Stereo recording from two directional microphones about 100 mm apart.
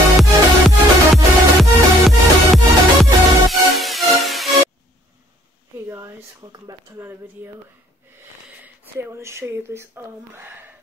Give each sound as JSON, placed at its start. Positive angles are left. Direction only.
{"t": 0.2, "sound": "music", "side_deg": 0}
{"t": 5.9, "sound": "a sound", "side_deg": -25}
{"t": 6.4, "sound": "speech", "side_deg": -40}
{"t": 7.0, "sound": "speech", "side_deg": -25}
{"t": 8.6, "sound": "speech", "side_deg": -25}